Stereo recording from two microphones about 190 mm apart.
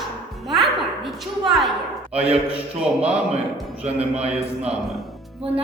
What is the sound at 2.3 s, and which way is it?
Speech, 30° right (ahead or behind).